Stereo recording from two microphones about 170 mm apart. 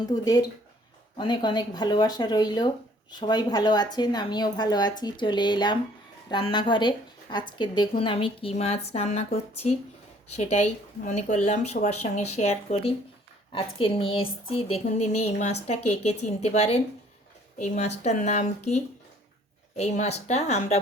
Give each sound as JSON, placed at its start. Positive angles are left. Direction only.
{"t": 0.0, "sound": "a woman's voice", "side_deg": 25}